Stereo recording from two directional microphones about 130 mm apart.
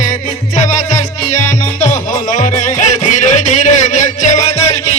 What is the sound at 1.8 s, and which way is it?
Music, 70° left (ahead or behind).